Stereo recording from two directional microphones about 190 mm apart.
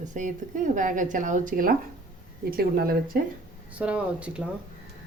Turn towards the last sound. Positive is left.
turn(degrees=-5)  # may be behind; listen again after turning